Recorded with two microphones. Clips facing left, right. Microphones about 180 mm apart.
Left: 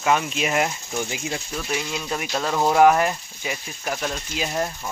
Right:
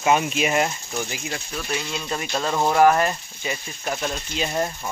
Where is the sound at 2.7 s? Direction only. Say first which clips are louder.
Left 1 dB; 10° left (ahead or behind).